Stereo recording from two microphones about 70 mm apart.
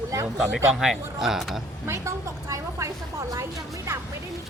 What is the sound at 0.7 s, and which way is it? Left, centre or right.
Speech, centre.